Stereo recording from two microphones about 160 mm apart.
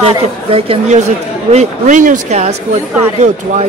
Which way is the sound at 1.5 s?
50° right (ahead or behind).